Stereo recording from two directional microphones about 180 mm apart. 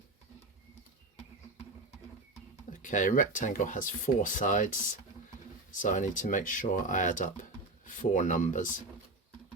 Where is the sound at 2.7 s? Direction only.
45° left (ahead or behind).